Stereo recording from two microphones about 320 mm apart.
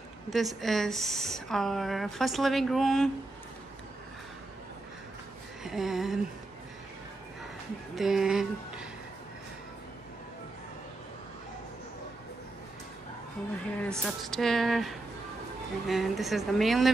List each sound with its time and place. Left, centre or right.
0.3 s a woman's voice: centre
5.6 s a sound: centre
7.9 s speech: centre
13.7 s a woman's voice: centre